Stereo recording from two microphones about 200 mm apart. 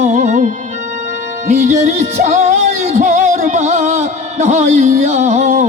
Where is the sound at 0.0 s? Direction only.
35° right (ahead or behind).